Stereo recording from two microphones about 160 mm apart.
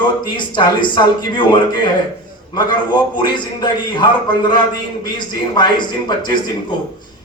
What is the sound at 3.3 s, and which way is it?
A man's voice, 30° left (ahead or behind).